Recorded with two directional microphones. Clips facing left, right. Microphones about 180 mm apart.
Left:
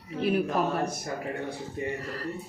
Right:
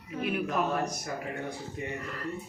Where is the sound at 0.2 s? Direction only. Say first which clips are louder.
Left 5 dB; 35° left (ahead or behind).